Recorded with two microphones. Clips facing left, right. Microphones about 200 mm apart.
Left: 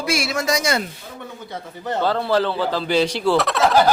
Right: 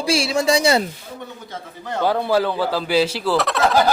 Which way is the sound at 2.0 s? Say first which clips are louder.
Right 1 dB; 15° right (ahead or behind).